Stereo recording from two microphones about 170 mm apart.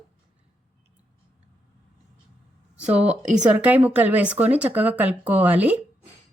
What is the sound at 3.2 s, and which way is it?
Speech, 5° right (ahead or behind).